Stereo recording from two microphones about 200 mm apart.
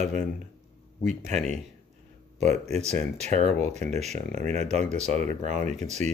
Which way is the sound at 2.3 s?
35° right (ahead or behind).